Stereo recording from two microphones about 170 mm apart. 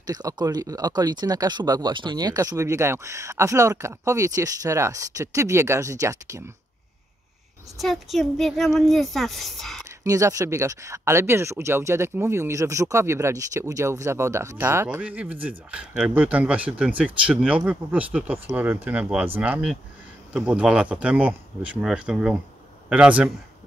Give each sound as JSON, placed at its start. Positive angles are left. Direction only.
{"t": 0.0, "sound": "speech", "side_deg": -20}
{"t": 7.8, "sound": "speech", "side_deg": 0}
{"t": 9.8, "sound": "speech", "side_deg": -20}